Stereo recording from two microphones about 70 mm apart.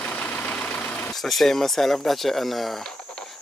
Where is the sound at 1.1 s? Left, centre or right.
Centre.